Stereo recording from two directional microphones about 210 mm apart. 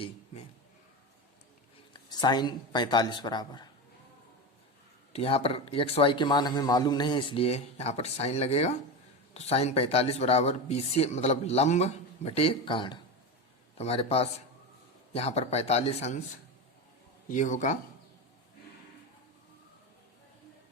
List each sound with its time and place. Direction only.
1.9 s speech: 20° left (ahead or behind)
5.1 s speech: 25° left (ahead or behind)
17.2 s speech: 40° left (ahead or behind)